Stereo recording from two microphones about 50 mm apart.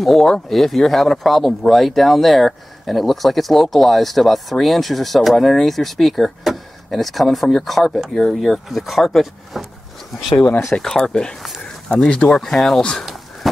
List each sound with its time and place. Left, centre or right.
0.0 s speech: centre
10.7 s speech: centre
12.4 s speech: centre
13.0 s a sound: centre